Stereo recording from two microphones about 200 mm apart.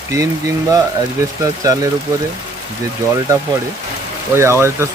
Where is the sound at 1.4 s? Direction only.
15° right (ahead or behind).